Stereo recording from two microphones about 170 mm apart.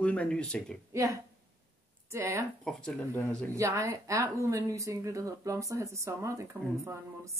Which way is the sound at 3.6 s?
15° right (ahead or behind).